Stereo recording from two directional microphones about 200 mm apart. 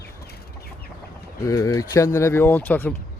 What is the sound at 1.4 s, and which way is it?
Speech, 15° left (ahead or behind).